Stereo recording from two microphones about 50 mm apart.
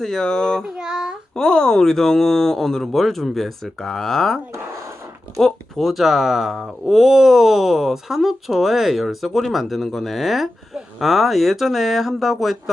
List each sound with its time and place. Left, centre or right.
0.0 s child singing: centre
0.8 s child singing: centre
1.4 s speech: centre
5.7 s speech: centre